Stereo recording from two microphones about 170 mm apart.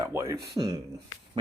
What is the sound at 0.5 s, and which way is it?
Speech, 30° right (ahead or behind).